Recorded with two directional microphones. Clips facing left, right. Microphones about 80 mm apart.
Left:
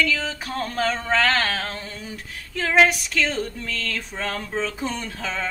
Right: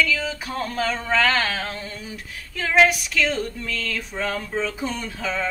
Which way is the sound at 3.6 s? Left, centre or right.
Left.